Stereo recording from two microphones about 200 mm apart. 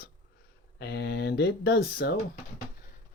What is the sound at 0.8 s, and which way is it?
Speech, 55° left (ahead or behind).